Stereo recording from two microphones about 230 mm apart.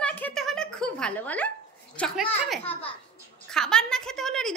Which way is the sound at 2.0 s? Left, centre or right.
Centre.